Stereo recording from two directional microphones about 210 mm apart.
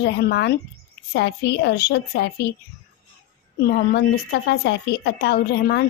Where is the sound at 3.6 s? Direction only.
50° left (ahead or behind).